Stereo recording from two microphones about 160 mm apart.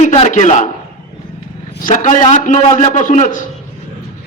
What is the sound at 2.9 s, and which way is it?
Speech, 50° left (ahead or behind).